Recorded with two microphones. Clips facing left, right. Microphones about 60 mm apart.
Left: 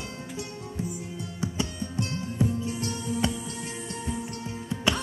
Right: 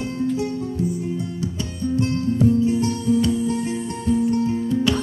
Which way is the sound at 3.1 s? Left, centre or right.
Left.